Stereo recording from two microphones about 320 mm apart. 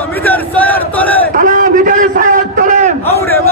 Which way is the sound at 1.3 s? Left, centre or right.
Right.